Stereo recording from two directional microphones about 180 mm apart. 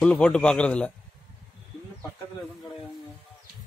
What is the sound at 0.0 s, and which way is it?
Speech, 5° left (ahead or behind).